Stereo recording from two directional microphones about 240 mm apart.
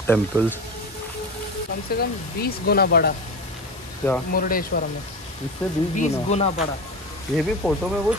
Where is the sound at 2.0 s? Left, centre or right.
Left.